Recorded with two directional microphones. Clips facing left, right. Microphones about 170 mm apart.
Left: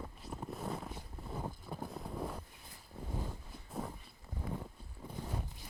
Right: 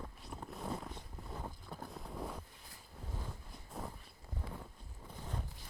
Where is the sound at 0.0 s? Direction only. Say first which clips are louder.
Left 3 dB; 5° left (ahead or behind).